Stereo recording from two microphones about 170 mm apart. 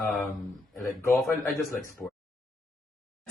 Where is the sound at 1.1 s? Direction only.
Centre (ahead or behind).